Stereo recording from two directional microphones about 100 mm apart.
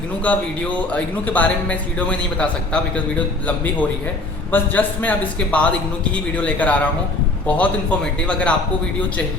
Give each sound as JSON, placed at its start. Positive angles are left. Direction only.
{"t": 0.3, "sound": "speech", "side_deg": 15}